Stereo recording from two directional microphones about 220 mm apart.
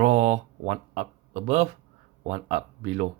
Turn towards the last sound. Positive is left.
turn(degrees=-30)  # may be behind; listen again after turning